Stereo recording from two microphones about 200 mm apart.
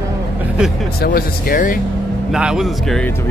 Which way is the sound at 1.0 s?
50° left (ahead or behind).